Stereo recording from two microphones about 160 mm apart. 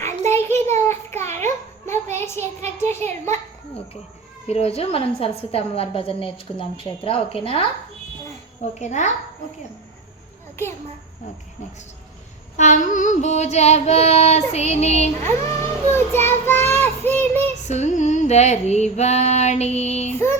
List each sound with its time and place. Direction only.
0.3 s a sound: 15° left (ahead or behind)
4.4 s a woman's voice: 40° left (ahead or behind)
8.8 s child singing: 45° left (ahead or behind)
12.5 s child singing: 50° left (ahead or behind)
15.2 s child singing: 15° left (ahead or behind)
17.7 s child singing: 45° left (ahead or behind)